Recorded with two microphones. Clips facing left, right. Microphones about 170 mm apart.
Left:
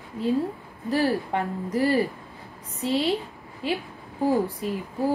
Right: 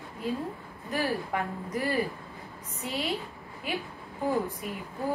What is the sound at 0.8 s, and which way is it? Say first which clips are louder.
A woman's voice: left 7 dB; 35° left (ahead or behind).